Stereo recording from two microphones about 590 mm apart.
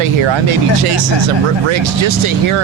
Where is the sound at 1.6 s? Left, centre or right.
Right.